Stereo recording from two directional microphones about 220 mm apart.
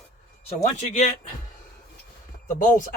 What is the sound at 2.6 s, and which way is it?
Speech, 35° left (ahead or behind).